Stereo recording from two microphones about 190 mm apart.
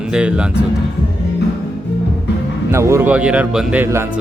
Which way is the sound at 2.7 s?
15° right (ahead or behind).